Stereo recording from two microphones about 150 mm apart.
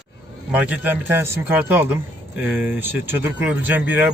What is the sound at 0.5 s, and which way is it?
A man's voice, 10° right (ahead or behind).